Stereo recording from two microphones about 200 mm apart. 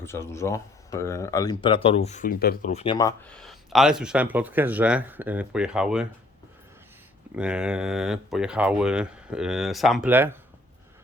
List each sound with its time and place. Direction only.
0.0 s speech: 15° left (ahead or behind); by 2.7 s 50° left (ahead or behind)
2.7 s speech: 25° left (ahead or behind)
3.3 s speech: centre (ahead or behind)
7.3 s speech: 5° right (ahead or behind)